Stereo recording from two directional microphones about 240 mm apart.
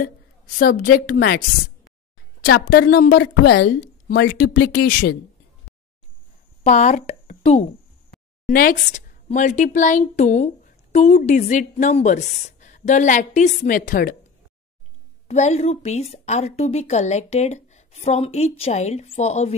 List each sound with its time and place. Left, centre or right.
0.6 s a woman's voice: left
2.4 s a woman's voice: left
6.6 s a woman's voice: left
15.2 s a woman's voice: left